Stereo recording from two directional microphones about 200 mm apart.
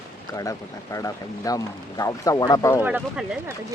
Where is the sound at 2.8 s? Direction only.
5° right (ahead or behind).